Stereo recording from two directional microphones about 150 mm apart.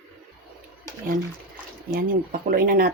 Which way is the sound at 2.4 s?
70° right (ahead or behind).